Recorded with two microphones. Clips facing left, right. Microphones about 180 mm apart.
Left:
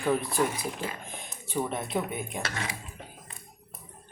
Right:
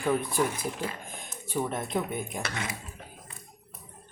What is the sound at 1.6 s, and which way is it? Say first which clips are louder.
Speech: even; centre (ahead or behind).